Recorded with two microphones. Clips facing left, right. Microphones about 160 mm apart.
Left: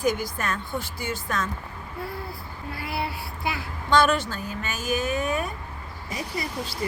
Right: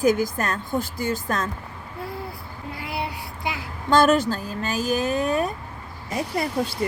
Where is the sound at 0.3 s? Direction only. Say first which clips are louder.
Right 4 dB; 40° right (ahead or behind).